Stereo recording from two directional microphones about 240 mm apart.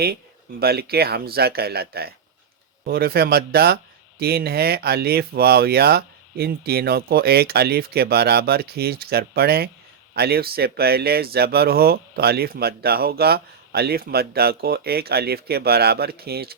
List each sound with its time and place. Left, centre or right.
0.6 s speech: right